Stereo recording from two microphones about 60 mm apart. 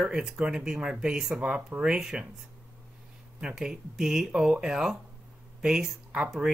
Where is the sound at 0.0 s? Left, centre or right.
Centre.